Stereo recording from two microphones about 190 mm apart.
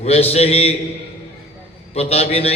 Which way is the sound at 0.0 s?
35° left (ahead or behind).